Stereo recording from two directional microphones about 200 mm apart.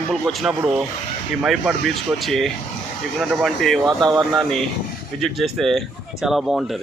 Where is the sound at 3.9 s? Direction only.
20° right (ahead or behind).